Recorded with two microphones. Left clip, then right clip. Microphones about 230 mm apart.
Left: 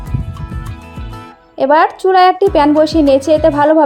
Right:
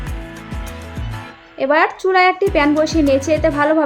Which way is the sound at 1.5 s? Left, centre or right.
Centre.